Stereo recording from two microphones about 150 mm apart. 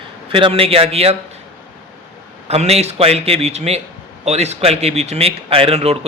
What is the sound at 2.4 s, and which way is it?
Speech, 45° right (ahead or behind).